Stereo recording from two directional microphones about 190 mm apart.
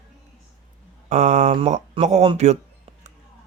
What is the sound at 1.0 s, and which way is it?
Speech, 40° right (ahead or behind).